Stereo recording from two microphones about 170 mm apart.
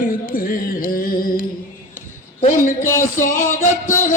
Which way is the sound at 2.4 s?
50° left (ahead or behind).